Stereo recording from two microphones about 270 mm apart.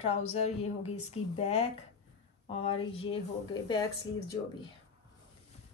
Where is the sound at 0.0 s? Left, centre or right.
Left.